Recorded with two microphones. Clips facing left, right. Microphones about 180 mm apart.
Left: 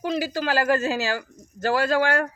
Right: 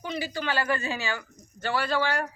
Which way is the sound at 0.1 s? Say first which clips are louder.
Left 5 dB; 40° left (ahead or behind).